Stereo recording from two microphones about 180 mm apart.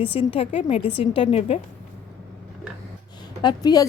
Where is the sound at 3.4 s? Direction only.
20° left (ahead or behind).